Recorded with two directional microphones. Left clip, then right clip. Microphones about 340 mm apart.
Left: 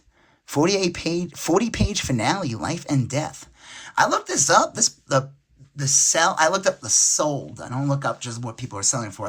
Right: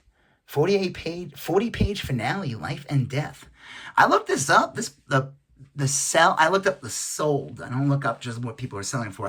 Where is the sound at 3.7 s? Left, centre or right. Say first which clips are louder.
Right 2 dB; centre.